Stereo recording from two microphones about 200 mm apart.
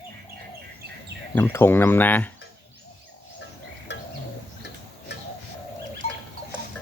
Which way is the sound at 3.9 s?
60° left (ahead or behind).